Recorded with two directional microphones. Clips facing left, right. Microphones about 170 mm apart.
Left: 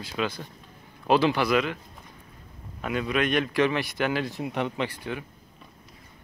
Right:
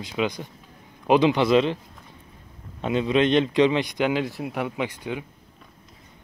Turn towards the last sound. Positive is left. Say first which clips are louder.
# right 2 dB
turn(degrees=-15)  # may be behind; listen again after turning